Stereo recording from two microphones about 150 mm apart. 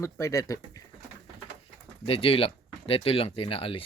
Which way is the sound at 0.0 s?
20° left (ahead or behind).